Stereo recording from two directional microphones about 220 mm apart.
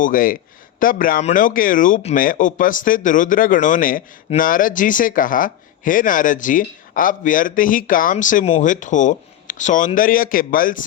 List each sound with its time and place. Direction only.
0.0 s speech: 40° left (ahead or behind)